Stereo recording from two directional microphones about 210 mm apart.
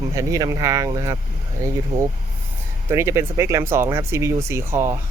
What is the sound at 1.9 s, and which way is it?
Speech, 35° right (ahead or behind).